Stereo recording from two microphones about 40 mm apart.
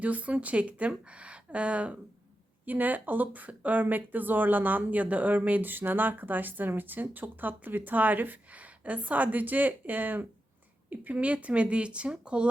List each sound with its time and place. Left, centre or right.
0.0 s speech: right
2.6 s speech: right
8.5 s speech: right